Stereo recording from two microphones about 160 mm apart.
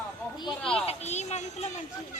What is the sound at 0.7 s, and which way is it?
Speech, 40° left (ahead or behind).